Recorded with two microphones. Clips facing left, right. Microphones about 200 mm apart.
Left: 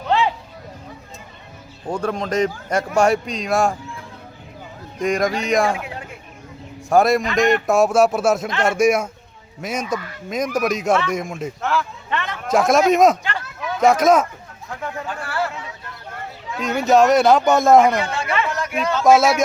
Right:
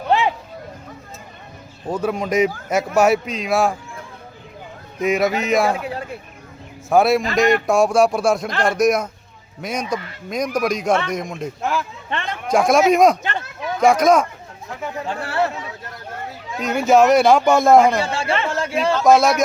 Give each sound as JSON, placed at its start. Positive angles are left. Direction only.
{"t": 0.1, "sound": "a sound", "side_deg": -15}
{"t": 1.9, "sound": "a man's voice", "side_deg": -10}
{"t": 4.9, "sound": "speech", "side_deg": -5}
{"t": 5.7, "sound": "a sound", "side_deg": -35}
{"t": 6.9, "sound": "a man's voice", "side_deg": 0}
{"t": 11.6, "sound": "a man's voice", "side_deg": -15}
{"t": 12.5, "sound": "speech", "side_deg": 0}
{"t": 15.0, "sound": "speech", "side_deg": -25}
{"t": 16.6, "sound": "speech", "side_deg": 0}
{"t": 18.0, "sound": "speech", "side_deg": -30}
{"t": 19.0, "sound": "speech", "side_deg": 5}